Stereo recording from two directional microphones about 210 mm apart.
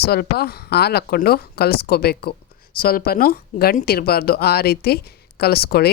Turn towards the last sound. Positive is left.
turn(degrees=45)  # may be behind; listen again after turning